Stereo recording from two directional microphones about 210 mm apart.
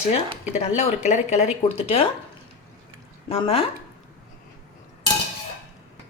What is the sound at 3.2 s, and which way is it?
Speech, 25° left (ahead or behind).